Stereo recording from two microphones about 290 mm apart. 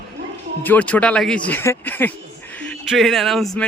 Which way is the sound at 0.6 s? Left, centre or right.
Centre.